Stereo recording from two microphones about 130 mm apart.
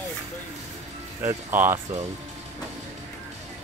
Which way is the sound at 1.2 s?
15° right (ahead or behind).